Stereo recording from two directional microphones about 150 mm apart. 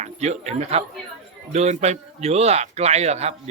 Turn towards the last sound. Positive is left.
turn(degrees=-45)  # may be behind; listen again after turning